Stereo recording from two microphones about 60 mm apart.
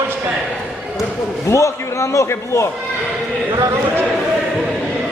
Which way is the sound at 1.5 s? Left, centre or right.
Left.